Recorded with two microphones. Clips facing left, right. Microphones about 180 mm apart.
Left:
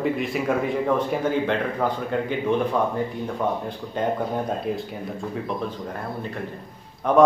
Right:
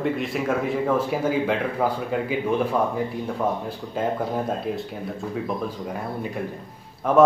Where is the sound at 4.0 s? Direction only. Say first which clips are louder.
Even; 5° right (ahead or behind).